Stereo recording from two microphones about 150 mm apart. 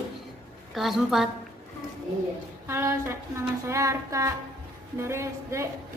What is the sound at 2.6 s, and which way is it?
A woman's voice, 15° right (ahead or behind).